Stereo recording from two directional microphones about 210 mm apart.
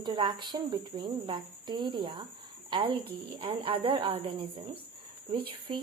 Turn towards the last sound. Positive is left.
turn(degrees=-25)  # may be behind; listen again after turning